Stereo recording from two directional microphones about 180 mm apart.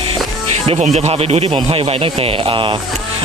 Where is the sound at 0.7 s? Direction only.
40° right (ahead or behind).